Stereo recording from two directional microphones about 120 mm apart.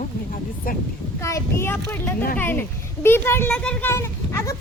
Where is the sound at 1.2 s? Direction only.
25° left (ahead or behind).